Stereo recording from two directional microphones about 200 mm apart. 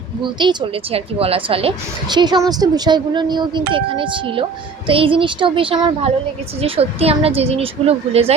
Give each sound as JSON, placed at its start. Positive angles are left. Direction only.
{"t": 0.2, "sound": "a woman's voice", "side_deg": -25}